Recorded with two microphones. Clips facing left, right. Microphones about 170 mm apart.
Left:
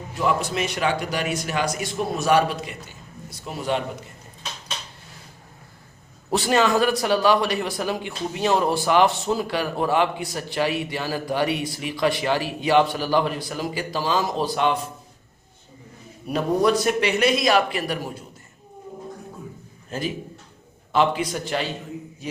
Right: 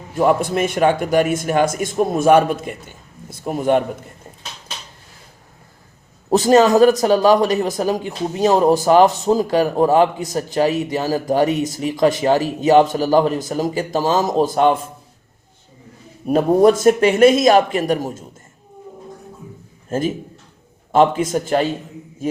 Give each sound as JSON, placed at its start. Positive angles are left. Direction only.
{"t": 0.1, "sound": "speech", "side_deg": -50}
{"t": 6.3, "sound": "speech", "side_deg": -40}
{"t": 16.2, "sound": "speech", "side_deg": -45}
{"t": 19.9, "sound": "speech", "side_deg": -45}
{"t": 22.2, "sound": "a sound", "side_deg": -50}